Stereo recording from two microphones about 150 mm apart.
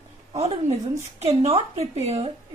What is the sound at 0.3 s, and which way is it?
Speech, 45° right (ahead or behind).